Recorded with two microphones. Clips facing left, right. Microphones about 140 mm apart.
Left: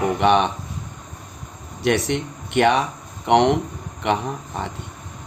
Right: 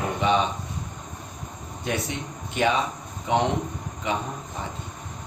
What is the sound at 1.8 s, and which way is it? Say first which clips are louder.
Speech: left 9 dB; 75° left (ahead or behind).